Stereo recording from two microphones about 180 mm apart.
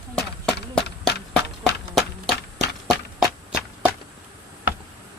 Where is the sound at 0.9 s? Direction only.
65° left (ahead or behind).